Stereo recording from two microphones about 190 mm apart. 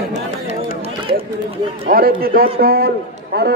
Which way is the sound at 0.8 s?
30° right (ahead or behind).